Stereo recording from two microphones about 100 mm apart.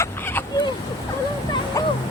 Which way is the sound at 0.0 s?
25° left (ahead or behind).